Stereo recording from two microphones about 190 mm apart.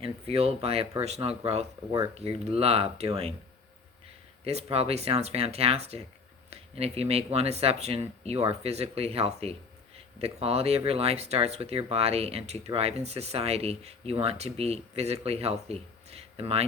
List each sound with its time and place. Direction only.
0.0 s speech: 30° right (ahead or behind)
4.4 s speech: 30° right (ahead or behind)